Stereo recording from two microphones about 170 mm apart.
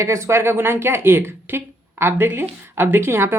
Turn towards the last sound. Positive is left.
turn(degrees=-15)  # may be behind; listen again after turning